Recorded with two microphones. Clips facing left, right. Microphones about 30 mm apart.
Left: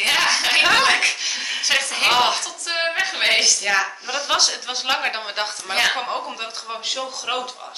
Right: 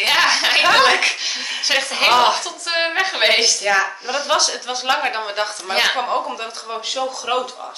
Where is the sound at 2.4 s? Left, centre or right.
Centre.